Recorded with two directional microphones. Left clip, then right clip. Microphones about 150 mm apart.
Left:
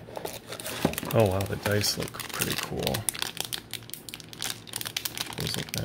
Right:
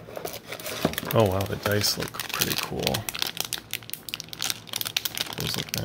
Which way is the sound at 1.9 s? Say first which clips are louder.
Right 3 dB; 15° right (ahead or behind).